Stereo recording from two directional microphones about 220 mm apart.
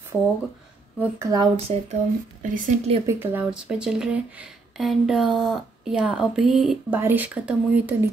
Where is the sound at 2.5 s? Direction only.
35° right (ahead or behind).